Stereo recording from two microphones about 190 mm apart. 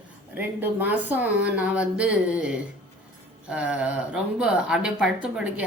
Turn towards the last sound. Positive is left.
turn(degrees=-10)  # may be behind; listen again after turning